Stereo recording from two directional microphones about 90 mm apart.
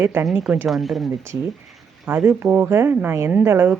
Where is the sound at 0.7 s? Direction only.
Centre (ahead or behind).